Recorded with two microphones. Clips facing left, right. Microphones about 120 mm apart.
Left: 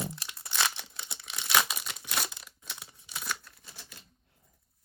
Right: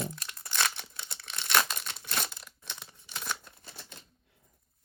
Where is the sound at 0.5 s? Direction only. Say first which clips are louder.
Even; 15° left (ahead or behind).